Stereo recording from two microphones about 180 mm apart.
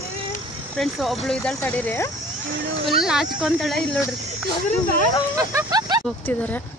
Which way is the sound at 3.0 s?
5° right (ahead or behind).